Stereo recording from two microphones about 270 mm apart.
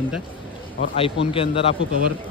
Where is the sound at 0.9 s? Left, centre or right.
Centre.